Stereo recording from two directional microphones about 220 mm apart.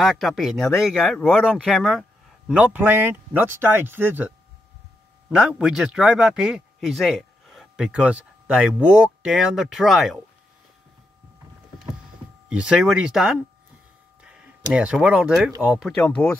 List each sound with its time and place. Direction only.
0.0 s speech: centre (ahead or behind)
5.3 s speech: 5° right (ahead or behind)
12.4 s speech: 5° right (ahead or behind)
16.0 s speech: 5° left (ahead or behind)